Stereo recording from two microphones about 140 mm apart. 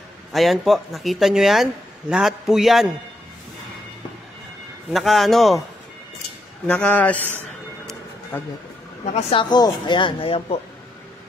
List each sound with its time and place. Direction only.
0.3 s speech: centre (ahead or behind)
4.9 s speech: centre (ahead or behind)
6.7 s a man's voice: 10° left (ahead or behind)
8.3 s a man's voice: 10° left (ahead or behind)
9.1 s speech: 40° left (ahead or behind)